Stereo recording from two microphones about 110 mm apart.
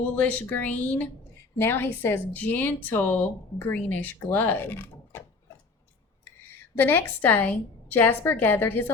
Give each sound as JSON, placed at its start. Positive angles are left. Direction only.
{"t": 0.0, "sound": "speech", "side_deg": 15}
{"t": 6.7, "sound": "speech", "side_deg": 20}